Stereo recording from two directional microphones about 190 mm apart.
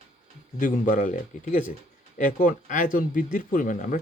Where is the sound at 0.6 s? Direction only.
45° left (ahead or behind).